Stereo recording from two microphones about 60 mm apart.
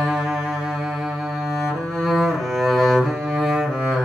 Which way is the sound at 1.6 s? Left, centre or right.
Centre.